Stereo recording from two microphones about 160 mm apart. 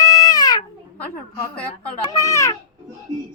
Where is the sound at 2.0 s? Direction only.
20° left (ahead or behind).